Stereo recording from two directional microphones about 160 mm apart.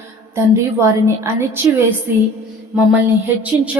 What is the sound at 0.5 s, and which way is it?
A woman's voice, 15° right (ahead or behind).